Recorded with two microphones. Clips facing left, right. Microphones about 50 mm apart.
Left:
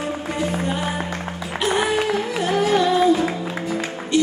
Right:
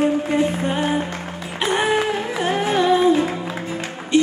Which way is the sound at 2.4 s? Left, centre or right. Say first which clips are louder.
Even; right.